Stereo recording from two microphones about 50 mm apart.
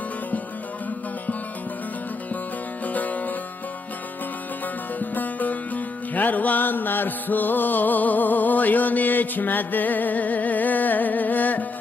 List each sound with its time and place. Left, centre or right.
2.8 s music: left
4.9 s music: left